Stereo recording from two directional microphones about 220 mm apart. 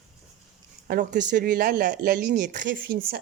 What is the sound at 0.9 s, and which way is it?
A woman's voice, 40° right (ahead or behind).